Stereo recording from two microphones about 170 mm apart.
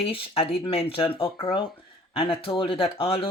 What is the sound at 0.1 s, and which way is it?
Speech, 30° left (ahead or behind).